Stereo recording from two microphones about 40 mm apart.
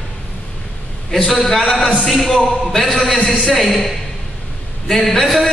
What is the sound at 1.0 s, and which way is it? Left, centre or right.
A man's voice, centre.